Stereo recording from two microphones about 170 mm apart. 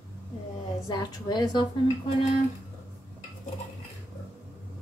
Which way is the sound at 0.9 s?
20° left (ahead or behind).